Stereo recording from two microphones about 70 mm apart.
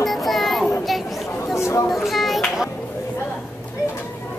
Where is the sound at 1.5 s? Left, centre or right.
Left.